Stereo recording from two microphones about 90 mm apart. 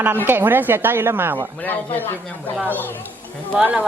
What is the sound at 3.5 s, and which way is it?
Speech, 10° right (ahead or behind).